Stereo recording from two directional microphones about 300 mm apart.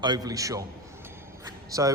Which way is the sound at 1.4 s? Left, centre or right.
Centre.